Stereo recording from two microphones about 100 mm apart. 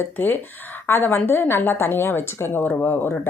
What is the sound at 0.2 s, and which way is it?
A woman's voice, 20° left (ahead or behind).